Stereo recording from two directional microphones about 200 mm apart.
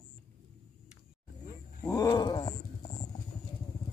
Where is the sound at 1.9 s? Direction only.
20° left (ahead or behind).